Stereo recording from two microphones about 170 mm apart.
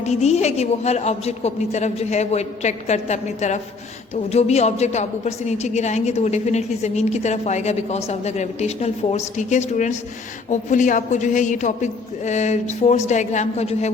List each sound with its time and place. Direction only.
0.0 s a woman's voice: 40° left (ahead or behind)